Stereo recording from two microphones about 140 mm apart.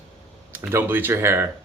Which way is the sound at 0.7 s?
15° right (ahead or behind).